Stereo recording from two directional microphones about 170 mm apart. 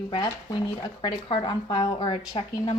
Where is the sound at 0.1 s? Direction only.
25° left (ahead or behind).